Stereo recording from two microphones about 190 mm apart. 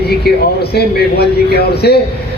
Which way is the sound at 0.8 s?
60° left (ahead or behind).